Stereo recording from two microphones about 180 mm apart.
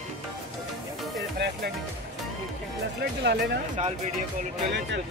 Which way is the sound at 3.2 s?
65° right (ahead or behind).